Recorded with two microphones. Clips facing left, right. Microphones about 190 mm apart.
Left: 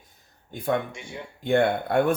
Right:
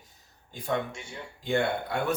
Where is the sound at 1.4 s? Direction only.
55° left (ahead or behind).